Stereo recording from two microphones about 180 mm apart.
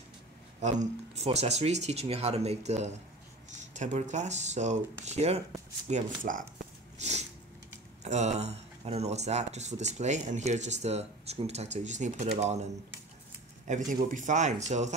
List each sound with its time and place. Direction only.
0.6 s speech: 40° right (ahead or behind)
7.0 s a sound: 40° right (ahead or behind)
8.0 s speech: 40° right (ahead or behind)
13.7 s speech: 45° right (ahead or behind)